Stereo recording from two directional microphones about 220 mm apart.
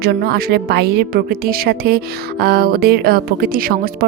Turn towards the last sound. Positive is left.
turn(degrees=-40)  # may be behind; listen again after turning